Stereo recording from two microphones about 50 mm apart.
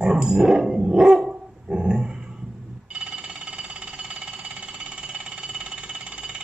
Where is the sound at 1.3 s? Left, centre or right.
Centre.